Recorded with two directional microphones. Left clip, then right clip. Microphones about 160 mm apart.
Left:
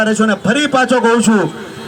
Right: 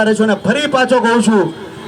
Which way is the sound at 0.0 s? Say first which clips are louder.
Right 1 dB; 20° right (ahead or behind).